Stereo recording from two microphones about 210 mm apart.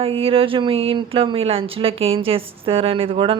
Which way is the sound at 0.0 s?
25° right (ahead or behind).